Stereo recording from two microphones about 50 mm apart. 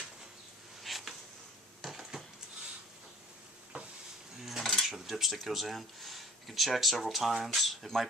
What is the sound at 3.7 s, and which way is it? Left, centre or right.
Stir, right.